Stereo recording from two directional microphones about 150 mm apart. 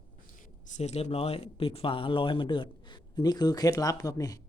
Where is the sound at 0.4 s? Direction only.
55° left (ahead or behind); by 4.4 s 25° left (ahead or behind).